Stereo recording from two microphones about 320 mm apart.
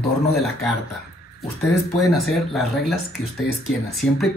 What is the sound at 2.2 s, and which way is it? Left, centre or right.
Speech, centre.